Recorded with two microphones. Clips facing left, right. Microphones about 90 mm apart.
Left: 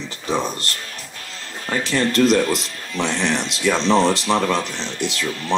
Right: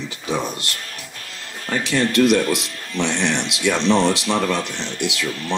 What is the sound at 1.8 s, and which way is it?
Speech, 35° left (ahead or behind).